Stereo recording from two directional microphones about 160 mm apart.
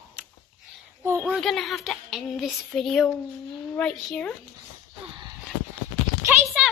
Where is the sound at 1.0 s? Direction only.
15° right (ahead or behind).